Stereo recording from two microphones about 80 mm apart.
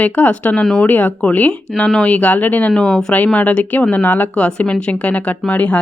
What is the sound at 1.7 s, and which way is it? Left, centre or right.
Speech, centre.